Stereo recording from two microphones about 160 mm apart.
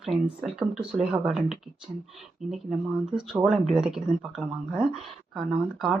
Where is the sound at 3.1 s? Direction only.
Centre (ahead or behind).